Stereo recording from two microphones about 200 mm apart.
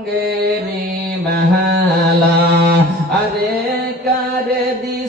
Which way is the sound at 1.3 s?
55° right (ahead or behind).